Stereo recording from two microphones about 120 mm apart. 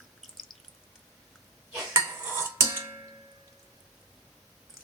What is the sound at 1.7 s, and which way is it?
Dishes, 20° right (ahead or behind).